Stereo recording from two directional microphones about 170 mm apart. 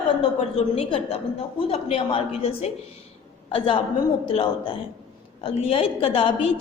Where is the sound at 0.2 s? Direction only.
35° left (ahead or behind).